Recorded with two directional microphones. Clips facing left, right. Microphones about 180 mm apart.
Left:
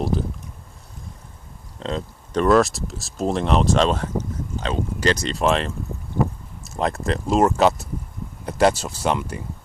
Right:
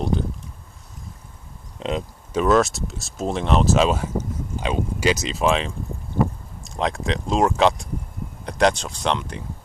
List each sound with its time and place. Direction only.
0.0 s speech: centre (ahead or behind)
1.8 s speech: 15° right (ahead or behind)
2.4 s speech: centre (ahead or behind)